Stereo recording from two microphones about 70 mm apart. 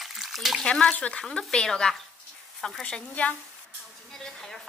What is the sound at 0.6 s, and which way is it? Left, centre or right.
Speech, centre.